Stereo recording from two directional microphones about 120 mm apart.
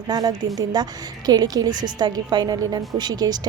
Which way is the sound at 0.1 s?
35° right (ahead or behind).